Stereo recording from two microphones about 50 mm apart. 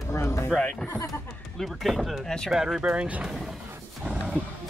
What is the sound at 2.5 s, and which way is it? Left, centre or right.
Speech, centre.